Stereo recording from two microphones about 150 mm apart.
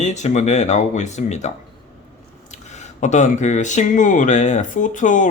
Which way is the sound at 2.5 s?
50° left (ahead or behind).